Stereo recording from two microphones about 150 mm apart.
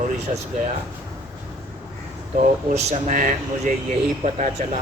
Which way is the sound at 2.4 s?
50° right (ahead or behind).